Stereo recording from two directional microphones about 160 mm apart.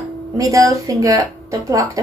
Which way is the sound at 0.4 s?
20° right (ahead or behind).